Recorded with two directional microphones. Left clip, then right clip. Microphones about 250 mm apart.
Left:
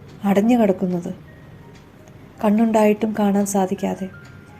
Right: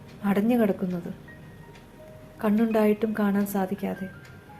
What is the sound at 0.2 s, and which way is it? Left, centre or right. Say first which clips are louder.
Speech: left 7 dB; left.